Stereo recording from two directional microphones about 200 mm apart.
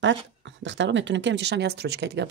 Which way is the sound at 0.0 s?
65° right (ahead or behind).